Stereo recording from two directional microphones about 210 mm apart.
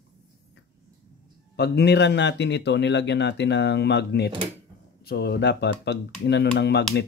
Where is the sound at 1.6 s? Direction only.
50° left (ahead or behind).